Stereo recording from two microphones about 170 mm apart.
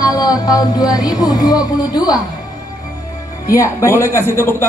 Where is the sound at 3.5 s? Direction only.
15° left (ahead or behind).